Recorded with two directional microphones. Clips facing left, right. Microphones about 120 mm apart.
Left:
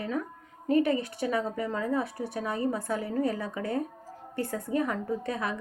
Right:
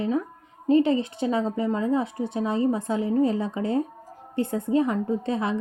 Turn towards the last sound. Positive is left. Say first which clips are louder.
# right 6 dB
turn(degrees=-25)  # may be behind; listen again after turning